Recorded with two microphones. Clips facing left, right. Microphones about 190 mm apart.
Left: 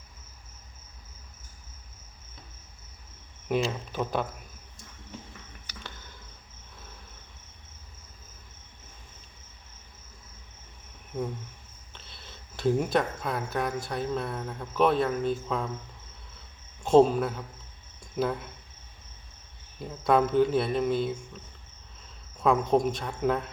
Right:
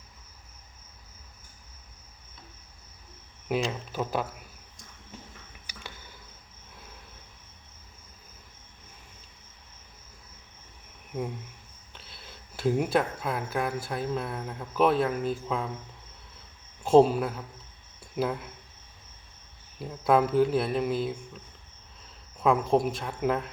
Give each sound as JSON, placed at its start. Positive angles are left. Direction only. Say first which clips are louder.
{"t": 3.5, "sound": "speech", "louder": "left 1 dB", "side_deg": -5}
{"t": 5.6, "sound": "cricket", "louder": "right 1 dB", "side_deg": -10}
{"t": 11.9, "sound": "speech", "louder": "right 1 dB", "side_deg": -5}
{"t": 16.8, "sound": "speech", "louder": "even", "side_deg": -5}
{"t": 19.8, "sound": "speech", "louder": "even", "side_deg": -5}
{"t": 22.4, "sound": "speech", "louder": "even", "side_deg": -5}